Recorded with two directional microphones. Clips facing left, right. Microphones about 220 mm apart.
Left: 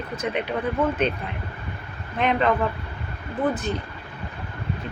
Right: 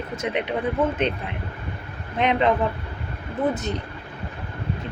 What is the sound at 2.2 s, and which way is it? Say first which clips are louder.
Speech: right 1 dB; 20° right (ahead or behind).